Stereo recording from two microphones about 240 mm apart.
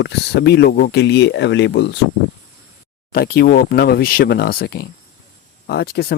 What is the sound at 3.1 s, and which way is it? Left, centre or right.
Speech, left.